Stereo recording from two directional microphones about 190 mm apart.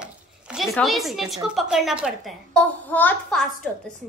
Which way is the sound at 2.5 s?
10° left (ahead or behind).